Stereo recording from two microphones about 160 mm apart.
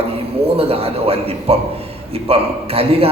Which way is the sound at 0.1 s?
35° right (ahead or behind).